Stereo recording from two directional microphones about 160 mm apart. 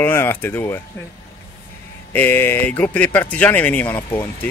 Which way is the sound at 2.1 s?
10° left (ahead or behind).